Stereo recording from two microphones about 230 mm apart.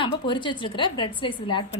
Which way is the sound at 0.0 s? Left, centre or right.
Centre.